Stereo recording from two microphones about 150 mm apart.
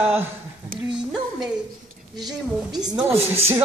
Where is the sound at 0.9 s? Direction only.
5° right (ahead or behind).